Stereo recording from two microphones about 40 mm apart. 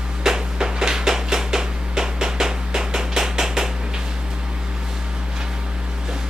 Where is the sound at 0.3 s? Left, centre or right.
Centre.